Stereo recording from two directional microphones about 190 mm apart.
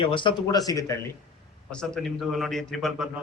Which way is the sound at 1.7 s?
5° left (ahead or behind).